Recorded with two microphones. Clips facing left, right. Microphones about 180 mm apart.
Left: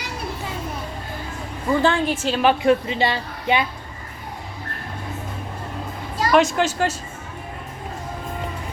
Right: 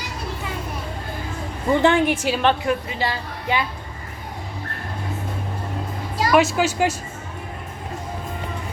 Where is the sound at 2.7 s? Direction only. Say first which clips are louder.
Left 5 dB; 25° left (ahead or behind).